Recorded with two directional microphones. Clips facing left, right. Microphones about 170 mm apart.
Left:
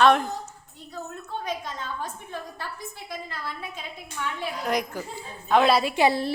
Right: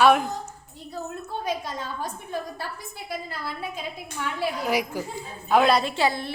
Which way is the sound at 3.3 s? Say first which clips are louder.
Right 3 dB; 10° right (ahead or behind).